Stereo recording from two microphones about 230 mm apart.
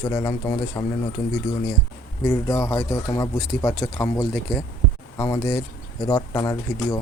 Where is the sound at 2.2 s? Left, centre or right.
Centre.